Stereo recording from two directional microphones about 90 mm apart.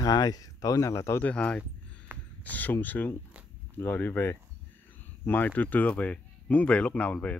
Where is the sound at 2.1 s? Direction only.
25° right (ahead or behind).